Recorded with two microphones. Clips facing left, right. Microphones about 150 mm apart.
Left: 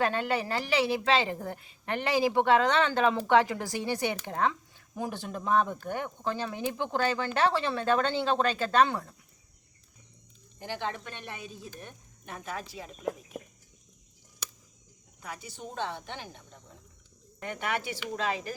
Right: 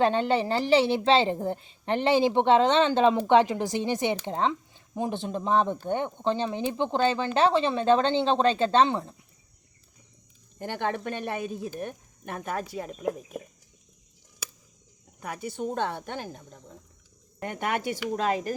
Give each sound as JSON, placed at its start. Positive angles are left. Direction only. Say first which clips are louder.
{"t": 0.0, "sound": "a woman's voice", "louder": "right 5 dB", "side_deg": -25}
{"t": 10.6, "sound": "speech", "louder": "right 5 dB", "side_deg": -55}
{"t": 15.2, "sound": "speech", "louder": "right 9 dB", "side_deg": -55}